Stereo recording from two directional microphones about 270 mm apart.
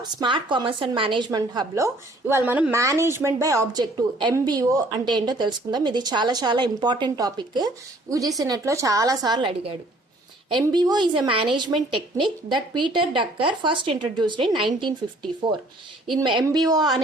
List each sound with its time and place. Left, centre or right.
0.0 s a woman's voice: centre
16.2 s a woman's voice: centre